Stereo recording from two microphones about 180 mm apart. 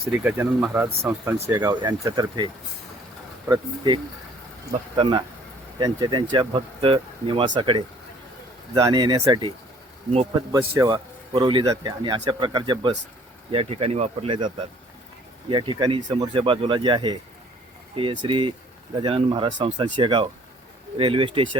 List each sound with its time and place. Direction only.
0.1 s speech: 10° right (ahead or behind)
3.5 s speech: 25° right (ahead or behind)
5.8 s speech: 25° right (ahead or behind)
10.5 s speech: 20° right (ahead or behind)